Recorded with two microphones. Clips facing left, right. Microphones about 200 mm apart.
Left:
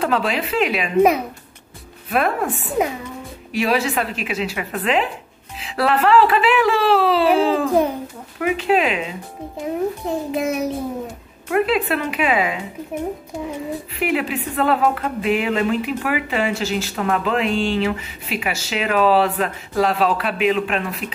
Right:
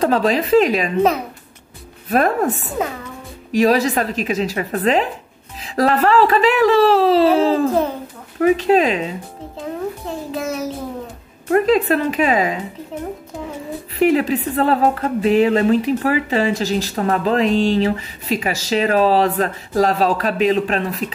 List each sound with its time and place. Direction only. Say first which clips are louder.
0.0 s speech: right 4 dB; 40° right (ahead or behind)
2.0 s speech: right 4 dB; 40° right (ahead or behind)
9.6 s a child's voice: left 3 dB; 15° left (ahead or behind)
11.4 s speech: right 4 dB; 40° right (ahead or behind)
13.9 s speech: right 7 dB; 40° right (ahead or behind)